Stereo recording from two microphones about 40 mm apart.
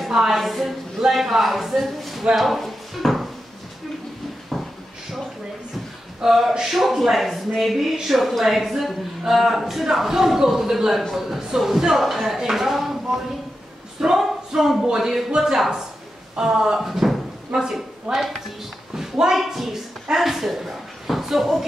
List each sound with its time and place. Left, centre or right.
0.1 s a sound: centre
0.4 s speech: centre
2.3 s drawer open or close: centre
6.2 s speech: centre
16.8 s a woman's voice: centre